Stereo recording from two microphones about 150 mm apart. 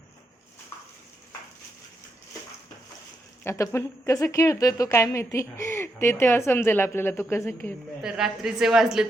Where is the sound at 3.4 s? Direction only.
20° left (ahead or behind).